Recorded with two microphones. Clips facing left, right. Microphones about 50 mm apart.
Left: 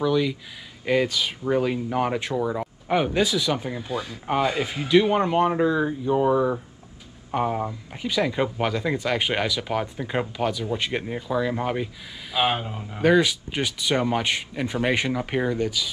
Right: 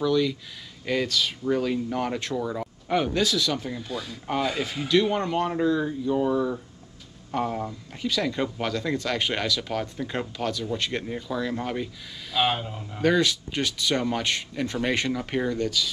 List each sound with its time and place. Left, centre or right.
0.0 s speech: centre